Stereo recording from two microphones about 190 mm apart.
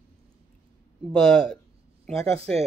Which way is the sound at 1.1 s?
5° left (ahead or behind).